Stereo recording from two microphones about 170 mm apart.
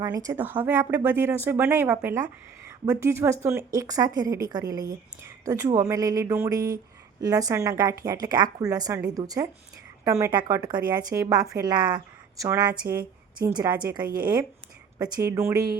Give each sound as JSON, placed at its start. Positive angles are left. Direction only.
{"t": 0.0, "sound": "speech", "side_deg": -20}
{"t": 12.8, "sound": "speech", "side_deg": -60}
{"t": 13.4, "sound": "speech", "side_deg": -25}
{"t": 14.9, "sound": "speech", "side_deg": -20}